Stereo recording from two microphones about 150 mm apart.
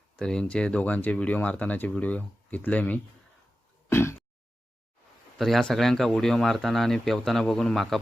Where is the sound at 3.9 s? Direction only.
15° left (ahead or behind).